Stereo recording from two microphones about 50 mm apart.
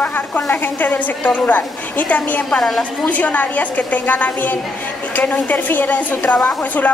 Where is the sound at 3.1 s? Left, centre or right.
Left.